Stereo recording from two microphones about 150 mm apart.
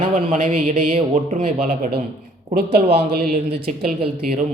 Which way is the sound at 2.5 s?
90° right.